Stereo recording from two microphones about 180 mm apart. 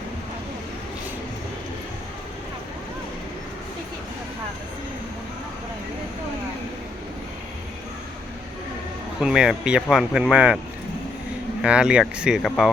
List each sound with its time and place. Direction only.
9.2 s speech: 5° right (ahead or behind)
11.6 s speech: 5° right (ahead or behind)